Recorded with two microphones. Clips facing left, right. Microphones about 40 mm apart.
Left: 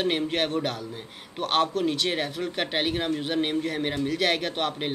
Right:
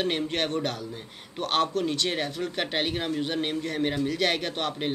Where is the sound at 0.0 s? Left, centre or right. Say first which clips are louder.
Left 2 dB; centre.